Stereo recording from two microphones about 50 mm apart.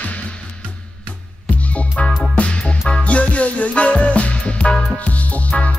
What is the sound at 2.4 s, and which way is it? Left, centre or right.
Music, left.